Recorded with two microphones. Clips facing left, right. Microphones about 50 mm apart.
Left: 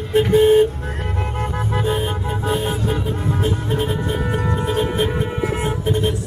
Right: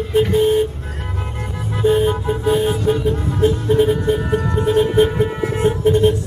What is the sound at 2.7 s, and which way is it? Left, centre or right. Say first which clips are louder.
Music: right 5 dB; centre.